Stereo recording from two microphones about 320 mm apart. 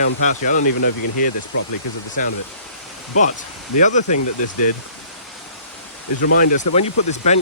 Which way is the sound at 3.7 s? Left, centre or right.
Left.